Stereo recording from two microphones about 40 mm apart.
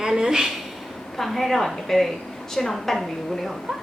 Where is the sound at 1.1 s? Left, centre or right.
Centre.